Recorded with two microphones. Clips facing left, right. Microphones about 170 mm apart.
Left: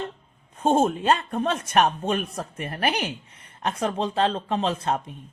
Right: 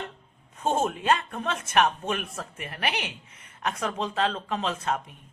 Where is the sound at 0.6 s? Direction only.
30° left (ahead or behind).